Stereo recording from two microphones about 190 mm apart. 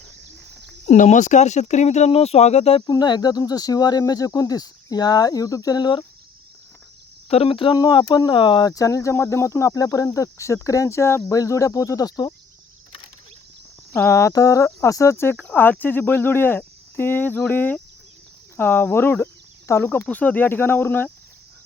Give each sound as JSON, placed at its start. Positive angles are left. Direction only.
{"t": 0.9, "sound": "speech", "side_deg": 40}
{"t": 7.3, "sound": "speech", "side_deg": 30}
{"t": 13.9, "sound": "speech", "side_deg": 15}